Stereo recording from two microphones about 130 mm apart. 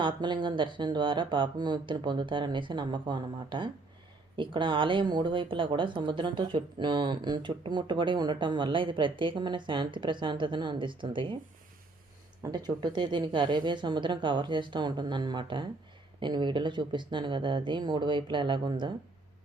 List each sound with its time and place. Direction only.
0.0 s speech: 35° right (ahead or behind)
12.4 s speech: 30° right (ahead or behind)